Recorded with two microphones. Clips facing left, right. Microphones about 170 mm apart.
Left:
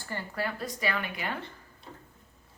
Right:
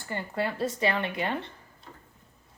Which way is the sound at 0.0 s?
20° right (ahead or behind).